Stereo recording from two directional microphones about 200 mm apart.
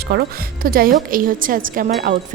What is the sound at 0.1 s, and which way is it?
A woman's voice, 50° right (ahead or behind).